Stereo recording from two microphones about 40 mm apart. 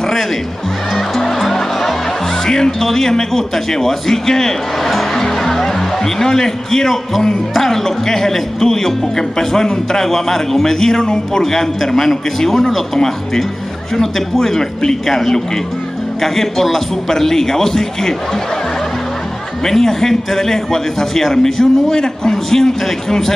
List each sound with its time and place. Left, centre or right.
0.9 s music: centre
2.4 s speech: centre
5.1 s music: centre
7.5 s a man's voice: centre
19.6 s speech: centre
21.9 s a man's voice: centre